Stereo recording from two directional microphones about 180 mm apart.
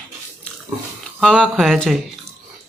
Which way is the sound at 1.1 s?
5° left (ahead or behind).